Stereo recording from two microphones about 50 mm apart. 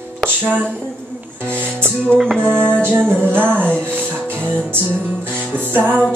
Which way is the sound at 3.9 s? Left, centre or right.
Right.